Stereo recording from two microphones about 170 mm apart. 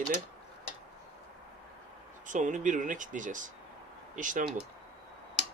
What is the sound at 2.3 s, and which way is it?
Speech, 45° right (ahead or behind).